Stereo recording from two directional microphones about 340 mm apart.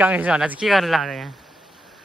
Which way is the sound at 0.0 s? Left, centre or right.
Centre.